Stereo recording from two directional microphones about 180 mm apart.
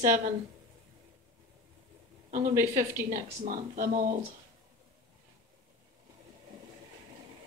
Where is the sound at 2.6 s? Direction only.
15° right (ahead or behind).